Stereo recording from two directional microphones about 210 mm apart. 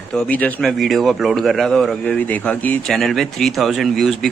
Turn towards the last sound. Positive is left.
turn(degrees=0)  # may be behind; listen again after turning